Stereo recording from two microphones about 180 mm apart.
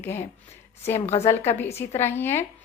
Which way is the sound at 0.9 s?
35° left (ahead or behind).